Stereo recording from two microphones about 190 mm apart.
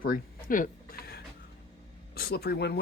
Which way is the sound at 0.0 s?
45° left (ahead or behind).